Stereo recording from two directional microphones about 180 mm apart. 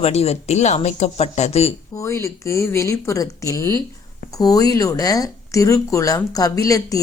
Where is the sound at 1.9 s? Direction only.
15° left (ahead or behind).